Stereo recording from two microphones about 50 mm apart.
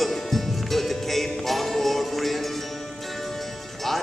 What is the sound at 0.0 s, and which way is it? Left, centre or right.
Music, centre.